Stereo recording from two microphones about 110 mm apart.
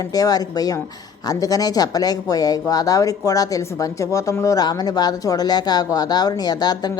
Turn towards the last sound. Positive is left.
turn(degrees=35)  # may be behind; listen again after turning